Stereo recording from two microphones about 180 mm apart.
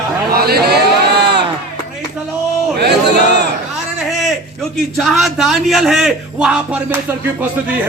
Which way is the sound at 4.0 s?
Centre (ahead or behind).